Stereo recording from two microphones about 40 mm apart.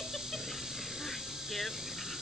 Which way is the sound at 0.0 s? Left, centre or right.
Centre.